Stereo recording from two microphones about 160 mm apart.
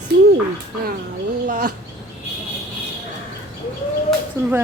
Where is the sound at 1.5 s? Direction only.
55° right (ahead or behind).